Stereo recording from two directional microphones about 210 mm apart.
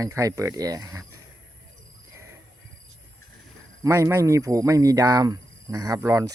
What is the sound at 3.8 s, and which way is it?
Speech, 15° right (ahead or behind).